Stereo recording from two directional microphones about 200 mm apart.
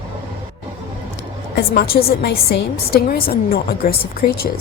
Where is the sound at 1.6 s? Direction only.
50° left (ahead or behind).